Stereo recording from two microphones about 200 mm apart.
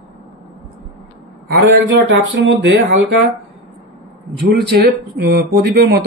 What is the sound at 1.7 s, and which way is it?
Speech, 70° right (ahead or behind).